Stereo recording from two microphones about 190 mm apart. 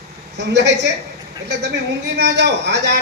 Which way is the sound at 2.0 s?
65° right (ahead or behind).